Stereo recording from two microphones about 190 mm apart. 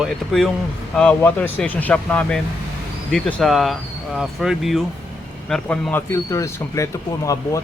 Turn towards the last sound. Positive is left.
turn(degrees=15)  # may be behind; listen again after turning